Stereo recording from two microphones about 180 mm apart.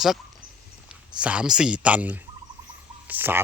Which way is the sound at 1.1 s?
5° right (ahead or behind).